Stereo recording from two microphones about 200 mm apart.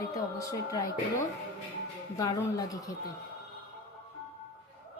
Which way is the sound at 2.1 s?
20° left (ahead or behind).